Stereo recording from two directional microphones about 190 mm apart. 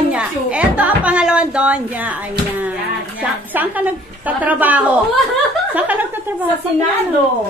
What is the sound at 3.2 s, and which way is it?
A woman's voice, 10° right (ahead or behind).